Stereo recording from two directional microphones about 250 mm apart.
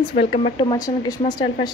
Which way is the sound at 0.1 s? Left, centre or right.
Left.